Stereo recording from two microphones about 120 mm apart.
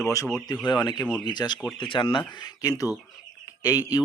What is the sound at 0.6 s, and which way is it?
A man's voice, 40° left (ahead or behind).